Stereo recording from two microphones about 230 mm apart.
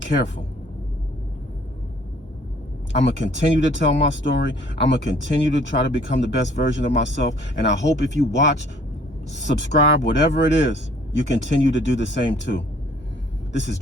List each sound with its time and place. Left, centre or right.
3.0 s speech: left